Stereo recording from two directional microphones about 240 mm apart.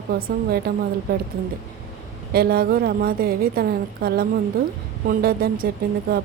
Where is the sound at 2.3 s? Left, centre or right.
Right.